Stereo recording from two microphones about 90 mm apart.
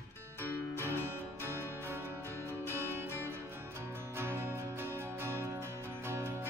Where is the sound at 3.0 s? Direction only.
25° left (ahead or behind).